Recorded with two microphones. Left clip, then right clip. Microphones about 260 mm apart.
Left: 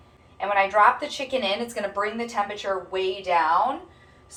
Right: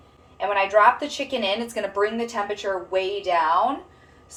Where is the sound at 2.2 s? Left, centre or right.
Right.